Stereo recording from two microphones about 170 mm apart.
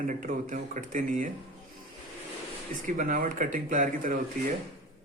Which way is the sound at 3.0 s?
50° right (ahead or behind).